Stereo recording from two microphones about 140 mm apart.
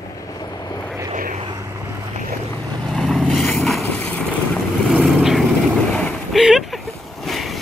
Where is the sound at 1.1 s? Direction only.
70° right (ahead or behind).